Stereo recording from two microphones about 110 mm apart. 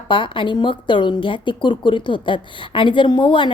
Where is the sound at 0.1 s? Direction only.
50° left (ahead or behind).